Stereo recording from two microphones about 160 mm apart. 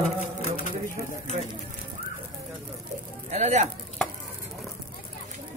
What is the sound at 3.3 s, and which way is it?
Speech, 45° right (ahead or behind).